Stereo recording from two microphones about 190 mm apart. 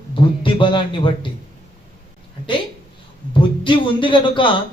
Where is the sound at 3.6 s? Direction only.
25° left (ahead or behind).